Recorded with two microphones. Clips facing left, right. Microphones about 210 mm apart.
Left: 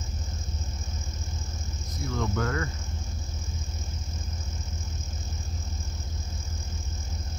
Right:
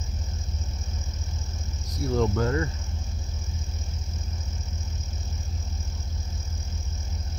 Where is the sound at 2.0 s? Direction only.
30° right (ahead or behind).